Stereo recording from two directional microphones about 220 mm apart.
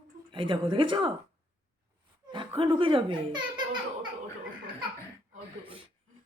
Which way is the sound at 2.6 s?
25° right (ahead or behind).